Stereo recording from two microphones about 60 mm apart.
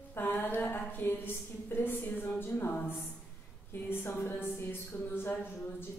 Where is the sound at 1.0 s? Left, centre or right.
Left.